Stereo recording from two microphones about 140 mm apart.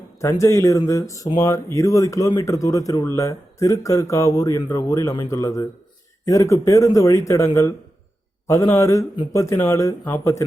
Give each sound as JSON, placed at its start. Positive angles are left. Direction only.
{"t": 0.2, "sound": "speech", "side_deg": 20}